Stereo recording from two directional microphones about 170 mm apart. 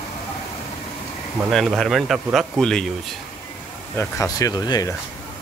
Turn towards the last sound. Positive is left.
turn(degrees=25)  # may be behind; listen again after turning